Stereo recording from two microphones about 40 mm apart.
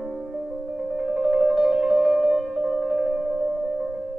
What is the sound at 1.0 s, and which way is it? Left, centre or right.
Music, centre.